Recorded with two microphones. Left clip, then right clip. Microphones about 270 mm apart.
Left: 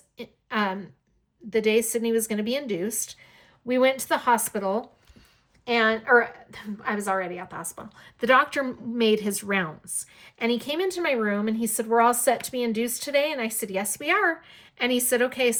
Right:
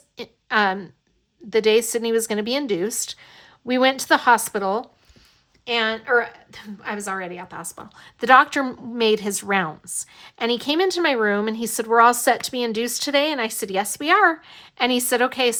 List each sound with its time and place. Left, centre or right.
0.2 s a woman's voice: centre
5.6 s a woman's voice: centre